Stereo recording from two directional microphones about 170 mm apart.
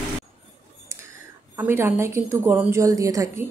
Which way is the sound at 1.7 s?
15° right (ahead or behind).